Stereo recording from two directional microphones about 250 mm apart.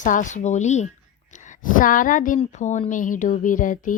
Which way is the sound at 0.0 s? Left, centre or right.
Left.